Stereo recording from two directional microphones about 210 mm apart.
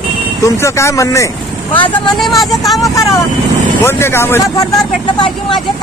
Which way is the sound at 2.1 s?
Centre (ahead or behind).